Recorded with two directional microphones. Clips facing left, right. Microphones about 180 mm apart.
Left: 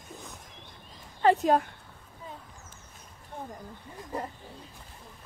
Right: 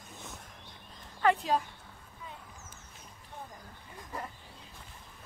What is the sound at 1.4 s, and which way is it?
Speech, 55° left (ahead or behind).